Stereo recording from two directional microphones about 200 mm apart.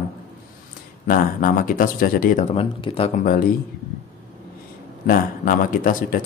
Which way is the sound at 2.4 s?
30° left (ahead or behind).